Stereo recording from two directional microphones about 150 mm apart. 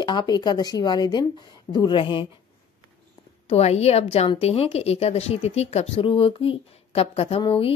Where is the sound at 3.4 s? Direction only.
45° left (ahead or behind).